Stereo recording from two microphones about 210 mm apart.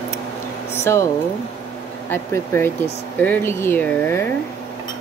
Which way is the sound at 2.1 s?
10° left (ahead or behind).